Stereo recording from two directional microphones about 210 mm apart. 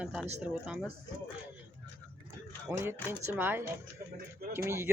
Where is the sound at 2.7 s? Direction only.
5° right (ahead or behind).